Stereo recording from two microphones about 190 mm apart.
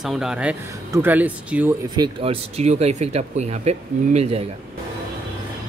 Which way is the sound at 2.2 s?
35° right (ahead or behind).